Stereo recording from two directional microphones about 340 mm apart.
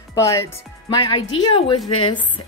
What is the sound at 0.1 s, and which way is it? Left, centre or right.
A woman's voice, centre.